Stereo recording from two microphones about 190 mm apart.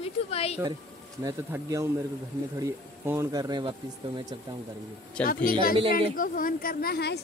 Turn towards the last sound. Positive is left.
turn(degrees=55)  # may be behind; listen again after turning